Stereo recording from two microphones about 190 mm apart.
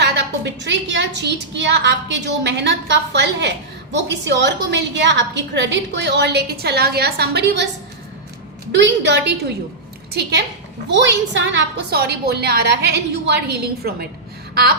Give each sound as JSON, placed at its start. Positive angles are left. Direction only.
{"t": 0.0, "sound": "a woman's voice", "side_deg": -65}
{"t": 8.7, "sound": "a woman's voice", "side_deg": -70}
{"t": 10.8, "sound": "a woman's voice", "side_deg": -65}
{"t": 14.5, "sound": "a sound", "side_deg": -55}